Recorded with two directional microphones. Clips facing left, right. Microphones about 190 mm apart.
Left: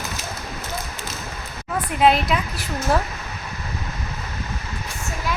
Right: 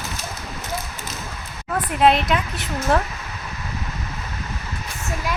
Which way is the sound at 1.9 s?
Centre (ahead or behind).